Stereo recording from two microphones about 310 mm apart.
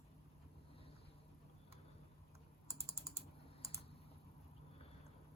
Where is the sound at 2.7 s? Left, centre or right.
Centre.